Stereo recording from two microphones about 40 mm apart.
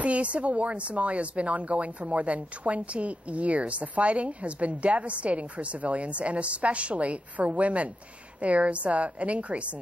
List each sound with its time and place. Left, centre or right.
0.0 s a woman's voice: right